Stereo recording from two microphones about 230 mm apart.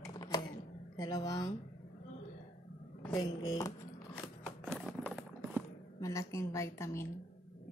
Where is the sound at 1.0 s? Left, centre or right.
Centre.